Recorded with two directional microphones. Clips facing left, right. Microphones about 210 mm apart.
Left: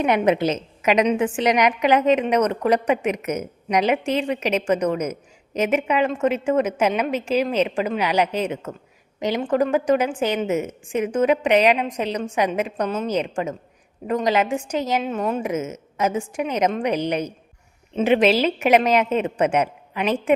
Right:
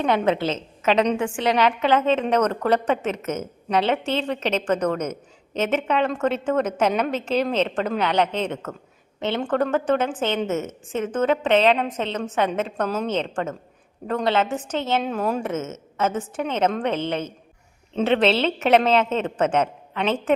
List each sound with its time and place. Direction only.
0.0 s speech: 15° left (ahead or behind); by 15.4 s centre (ahead or behind)
15.4 s speech: 15° left (ahead or behind)